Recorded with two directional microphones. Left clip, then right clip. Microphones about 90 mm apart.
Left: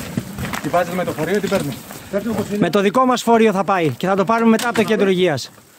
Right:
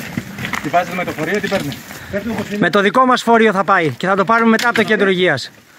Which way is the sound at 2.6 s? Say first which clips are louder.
Right 3 dB; 10° left (ahead or behind).